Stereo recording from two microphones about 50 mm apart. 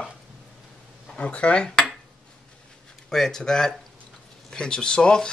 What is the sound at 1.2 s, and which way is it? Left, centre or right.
Speech, left.